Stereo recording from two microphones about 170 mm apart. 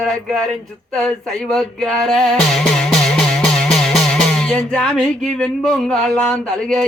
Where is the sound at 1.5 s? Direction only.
Centre (ahead or behind).